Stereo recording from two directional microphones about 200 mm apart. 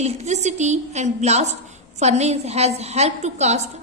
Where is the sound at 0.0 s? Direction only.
35° right (ahead or behind).